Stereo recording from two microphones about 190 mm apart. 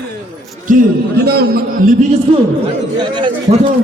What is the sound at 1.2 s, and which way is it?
Speech, 55° right (ahead or behind).